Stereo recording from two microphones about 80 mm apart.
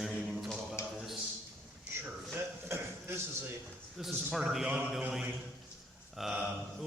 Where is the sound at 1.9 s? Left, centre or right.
Right.